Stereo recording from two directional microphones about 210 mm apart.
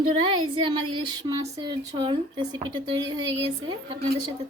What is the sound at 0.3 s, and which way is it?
Speech, 20° right (ahead or behind).